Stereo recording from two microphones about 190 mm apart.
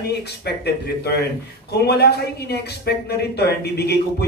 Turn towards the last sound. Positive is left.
turn(degrees=60)  # may be behind; listen again after turning